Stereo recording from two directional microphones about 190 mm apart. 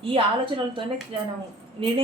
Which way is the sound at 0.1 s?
25° right (ahead or behind).